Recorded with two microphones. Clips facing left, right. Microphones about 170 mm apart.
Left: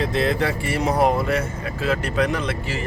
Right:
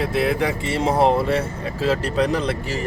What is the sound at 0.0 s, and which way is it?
Speech, 10° right (ahead or behind).